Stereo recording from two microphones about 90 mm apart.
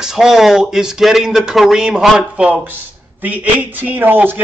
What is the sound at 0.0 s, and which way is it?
A man's voice, 5° right (ahead or behind).